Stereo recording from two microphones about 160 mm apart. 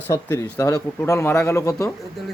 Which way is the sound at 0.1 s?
15° left (ahead or behind).